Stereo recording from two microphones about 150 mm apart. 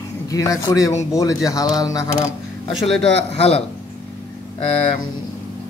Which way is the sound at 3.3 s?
40° left (ahead or behind).